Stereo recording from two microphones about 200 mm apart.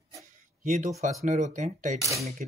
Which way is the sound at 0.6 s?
40° right (ahead or behind).